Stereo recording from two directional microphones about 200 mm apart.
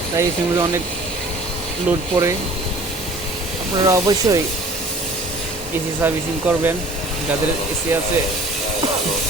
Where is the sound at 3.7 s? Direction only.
20° right (ahead or behind).